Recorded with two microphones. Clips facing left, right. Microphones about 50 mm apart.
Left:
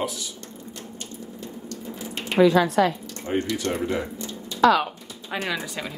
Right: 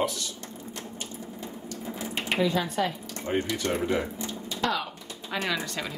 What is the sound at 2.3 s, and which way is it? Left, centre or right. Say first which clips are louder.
Speech: left 9 dB; left.